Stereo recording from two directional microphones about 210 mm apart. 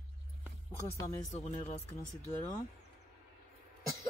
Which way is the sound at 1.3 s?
30° left (ahead or behind).